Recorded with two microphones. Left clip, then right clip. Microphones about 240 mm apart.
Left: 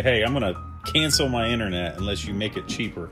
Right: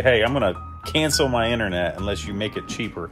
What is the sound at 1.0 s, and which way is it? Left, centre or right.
Speech, centre.